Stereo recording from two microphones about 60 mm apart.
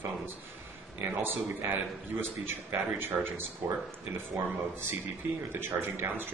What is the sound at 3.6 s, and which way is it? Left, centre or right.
Speech, right.